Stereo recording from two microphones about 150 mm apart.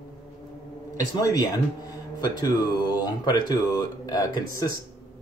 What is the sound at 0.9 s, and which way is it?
Speech, 25° left (ahead or behind).